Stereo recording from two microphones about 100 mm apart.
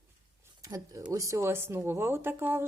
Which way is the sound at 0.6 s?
35° right (ahead or behind).